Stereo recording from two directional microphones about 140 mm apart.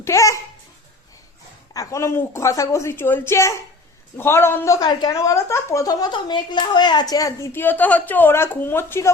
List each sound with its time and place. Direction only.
0.0 s a woman's voice: 20° left (ahead or behind)
1.7 s a woman's voice: 25° left (ahead or behind)